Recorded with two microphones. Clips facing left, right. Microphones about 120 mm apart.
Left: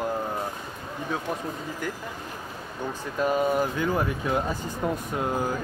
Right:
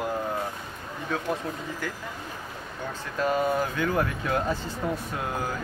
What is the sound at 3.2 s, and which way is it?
Speech, 15° left (ahead or behind).